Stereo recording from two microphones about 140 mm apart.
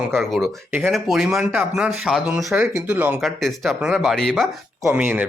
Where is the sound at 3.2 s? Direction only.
Centre (ahead or behind).